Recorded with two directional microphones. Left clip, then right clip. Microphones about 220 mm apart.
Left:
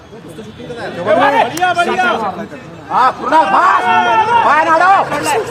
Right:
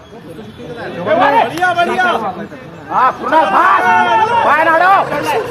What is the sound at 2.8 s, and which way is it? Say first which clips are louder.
Speech: left 1 dB; 45° left (ahead or behind).